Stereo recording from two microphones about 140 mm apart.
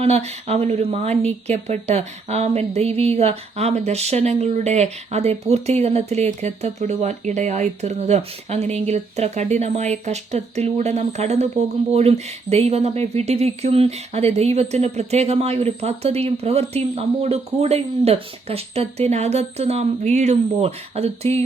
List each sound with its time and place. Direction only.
0.0 s speech: 50° right (ahead or behind)